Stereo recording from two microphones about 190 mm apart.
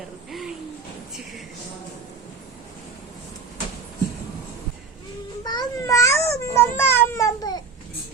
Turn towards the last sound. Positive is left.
turn(degrees=20)  # may be behind; listen again after turning